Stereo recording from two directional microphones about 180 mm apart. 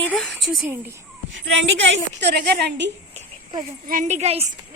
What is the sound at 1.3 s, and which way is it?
A woman's voice, 90° right.